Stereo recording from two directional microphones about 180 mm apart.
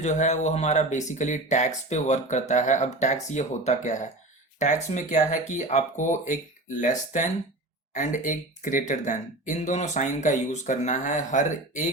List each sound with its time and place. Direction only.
0.0 s speech: 40° left (ahead or behind)